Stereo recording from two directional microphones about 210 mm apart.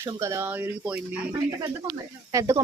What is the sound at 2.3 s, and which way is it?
Speech, 15° right (ahead or behind).